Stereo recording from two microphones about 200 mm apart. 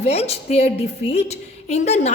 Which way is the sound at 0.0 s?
30° left (ahead or behind).